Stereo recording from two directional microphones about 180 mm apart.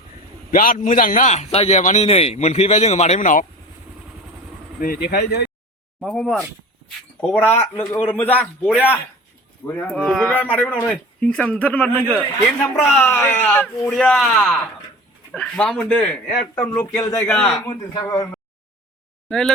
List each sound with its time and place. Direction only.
0.5 s a man's voice: 50° left (ahead or behind)
4.8 s speech: 60° left (ahead or behind)
6.0 s speech: centre (ahead or behind)
16.9 s a man's voice: 20° left (ahead or behind)
17.3 s speech: 5° left (ahead or behind)
17.6 s a man's voice: 20° left (ahead or behind)
19.3 s speech: 5° left (ahead or behind)